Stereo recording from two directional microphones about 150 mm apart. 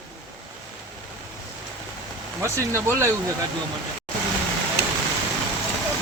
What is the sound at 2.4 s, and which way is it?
Speech, 20° right (ahead or behind).